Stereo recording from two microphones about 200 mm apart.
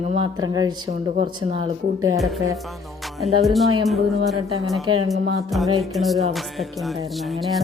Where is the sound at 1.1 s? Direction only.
35° right (ahead or behind).